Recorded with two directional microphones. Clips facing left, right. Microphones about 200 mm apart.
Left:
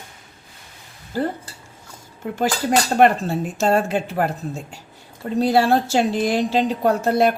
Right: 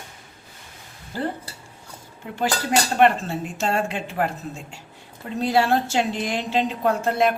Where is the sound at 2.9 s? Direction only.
40° left (ahead or behind).